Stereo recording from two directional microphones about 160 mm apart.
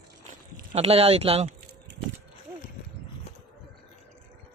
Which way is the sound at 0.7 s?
40° right (ahead or behind).